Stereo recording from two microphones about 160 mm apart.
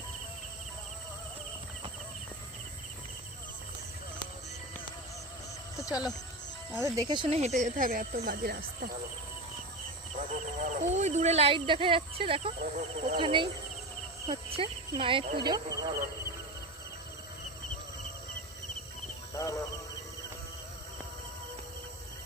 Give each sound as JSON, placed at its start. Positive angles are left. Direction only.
{"t": 5.8, "sound": "speech", "side_deg": 25}
{"t": 6.7, "sound": "speech", "side_deg": -20}
{"t": 7.3, "sound": "speech", "side_deg": -45}
{"t": 10.2, "sound": "speech", "side_deg": -50}
{"t": 19.3, "sound": "a sound", "side_deg": 20}